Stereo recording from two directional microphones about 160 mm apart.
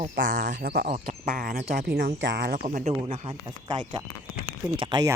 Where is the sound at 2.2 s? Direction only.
90° right.